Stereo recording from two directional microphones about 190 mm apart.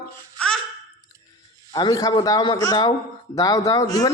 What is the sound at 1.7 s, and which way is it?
Speech, 20° left (ahead or behind).